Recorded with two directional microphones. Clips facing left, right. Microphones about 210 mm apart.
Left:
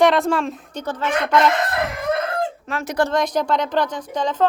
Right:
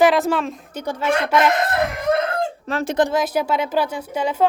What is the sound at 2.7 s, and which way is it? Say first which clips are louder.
Speech: right 4 dB; 35° right (ahead or behind).